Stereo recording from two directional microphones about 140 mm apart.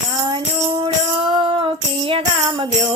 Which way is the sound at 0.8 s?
35° right (ahead or behind).